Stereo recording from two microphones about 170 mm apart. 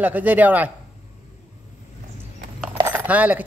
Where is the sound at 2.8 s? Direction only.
10° right (ahead or behind).